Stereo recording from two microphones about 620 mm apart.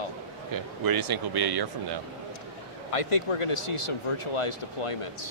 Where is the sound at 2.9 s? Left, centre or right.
Left.